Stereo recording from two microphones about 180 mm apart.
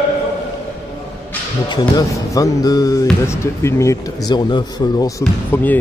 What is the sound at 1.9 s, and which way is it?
Speech, 20° left (ahead or behind).